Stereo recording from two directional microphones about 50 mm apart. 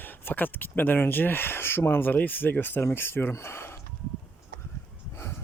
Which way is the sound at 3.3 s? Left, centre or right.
Left.